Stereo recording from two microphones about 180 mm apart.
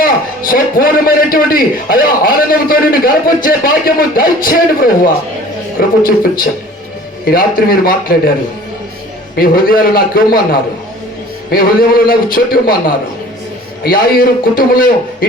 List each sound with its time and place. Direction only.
0.0 s a man's voice: 50° left (ahead or behind)
9.3 s a man's voice: 55° left (ahead or behind)
11.5 s a man's voice: 55° left (ahead or behind)